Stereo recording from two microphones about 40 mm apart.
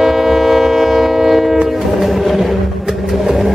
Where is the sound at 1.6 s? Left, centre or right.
Centre.